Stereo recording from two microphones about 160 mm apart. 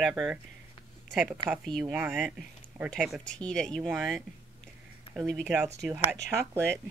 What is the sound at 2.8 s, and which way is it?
Speech, centre (ahead or behind).